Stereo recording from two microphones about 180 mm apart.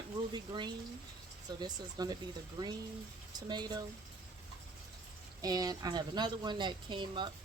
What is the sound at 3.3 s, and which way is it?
Speech, 25° right (ahead or behind).